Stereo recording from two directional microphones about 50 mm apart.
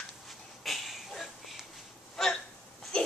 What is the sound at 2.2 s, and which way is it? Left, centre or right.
Hiccup, centre.